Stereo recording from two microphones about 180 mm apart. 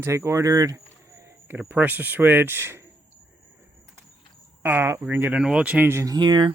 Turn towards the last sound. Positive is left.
turn(degrees=-25)  # may be behind; listen again after turning